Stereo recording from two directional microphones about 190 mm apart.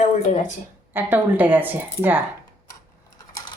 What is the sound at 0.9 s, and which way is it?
Speech, 10° right (ahead or behind).